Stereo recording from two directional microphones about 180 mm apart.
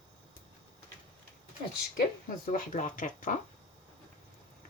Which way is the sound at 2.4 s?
50° left (ahead or behind).